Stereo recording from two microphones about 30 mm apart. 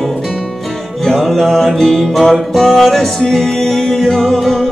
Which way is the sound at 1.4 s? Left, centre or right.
Centre.